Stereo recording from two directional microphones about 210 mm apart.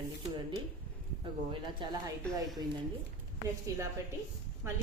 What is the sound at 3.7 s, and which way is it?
Speech, 15° right (ahead or behind).